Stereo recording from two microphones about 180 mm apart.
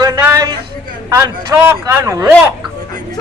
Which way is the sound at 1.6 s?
15° right (ahead or behind).